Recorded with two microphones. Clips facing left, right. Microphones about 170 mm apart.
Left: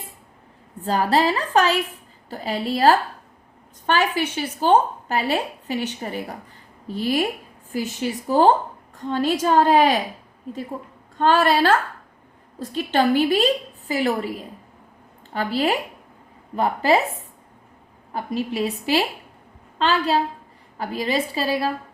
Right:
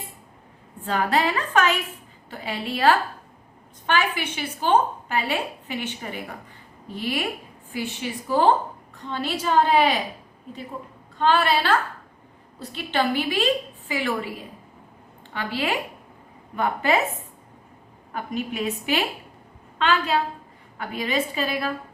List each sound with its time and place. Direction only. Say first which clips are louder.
0.8 s a woman's voice: left 3 dB; 35° left (ahead or behind)
11.2 s a woman's voice: left 3 dB; 45° left (ahead or behind)
15.3 s a woman's voice: left 5 dB; 35° left (ahead or behind)
18.1 s a woman's voice: left 3 dB; 35° left (ahead or behind)